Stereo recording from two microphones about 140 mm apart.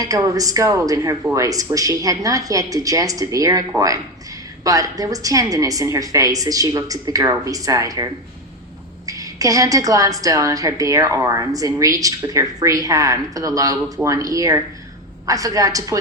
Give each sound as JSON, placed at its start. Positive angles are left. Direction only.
{"t": 0.0, "sound": "a woman's voice", "side_deg": -25}
{"t": 9.0, "sound": "a woman's voice", "side_deg": -25}